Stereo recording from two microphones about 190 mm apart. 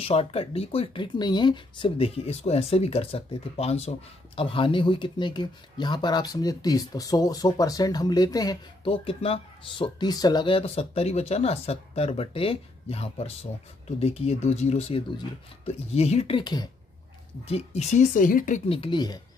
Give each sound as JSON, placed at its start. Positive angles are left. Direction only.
{"t": 0.0, "sound": "speech", "side_deg": 30}
{"t": 17.5, "sound": "speech", "side_deg": 35}
{"t": 18.7, "sound": "speech", "side_deg": 25}